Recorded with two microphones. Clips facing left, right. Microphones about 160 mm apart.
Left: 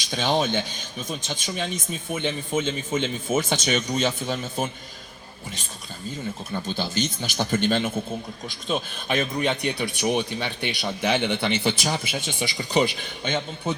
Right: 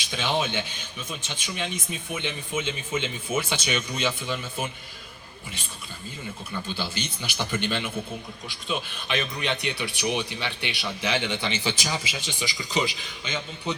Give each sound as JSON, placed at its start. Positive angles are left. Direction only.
{"t": 0.1, "sound": "speech", "side_deg": 40}
{"t": 6.7, "sound": "speech", "side_deg": 45}